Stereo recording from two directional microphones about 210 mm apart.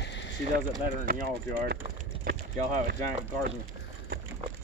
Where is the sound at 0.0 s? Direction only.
55° left (ahead or behind).